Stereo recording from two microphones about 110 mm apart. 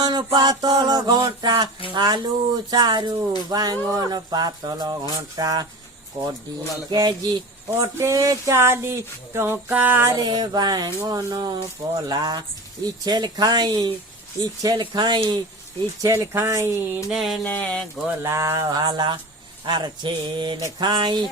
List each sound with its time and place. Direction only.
0.0 s music: 40° right (ahead or behind)
6.2 s speech: 60° right (ahead or behind)
6.9 s music: 35° right (ahead or behind)
7.7 s speech: 25° right (ahead or behind)
10.1 s music: 40° right (ahead or behind)
14.8 s a sound: 45° right (ahead or behind)
16.0 s speech: 30° right (ahead or behind)
17.1 s mantra: centre (ahead or behind)
17.5 s a sound: 15° left (ahead or behind)
18.2 s music: 25° right (ahead or behind); by 19.2 s 45° right (ahead or behind)
19.6 s a sound: 45° right (ahead or behind)
20.6 s music: 35° right (ahead or behind)